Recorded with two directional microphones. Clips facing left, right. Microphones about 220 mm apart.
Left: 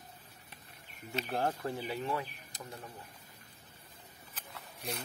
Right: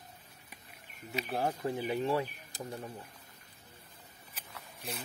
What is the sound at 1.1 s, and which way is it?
Speech, 10° right (ahead or behind).